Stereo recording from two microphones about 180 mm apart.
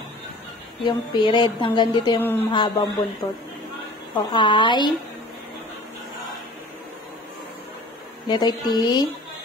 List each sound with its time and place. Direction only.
0.8 s speech: 25° left (ahead or behind)
2.1 s speech: 10° left (ahead or behind)
2.5 s speech: 25° left (ahead or behind)
4.2 s speech: 25° left (ahead or behind)
8.3 s speech: 20° left (ahead or behind)